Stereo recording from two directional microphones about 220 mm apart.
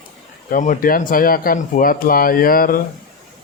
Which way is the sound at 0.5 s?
35° left (ahead or behind).